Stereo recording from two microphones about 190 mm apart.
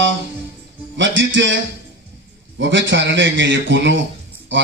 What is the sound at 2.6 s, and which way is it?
A man's voice, 75° right (ahead or behind).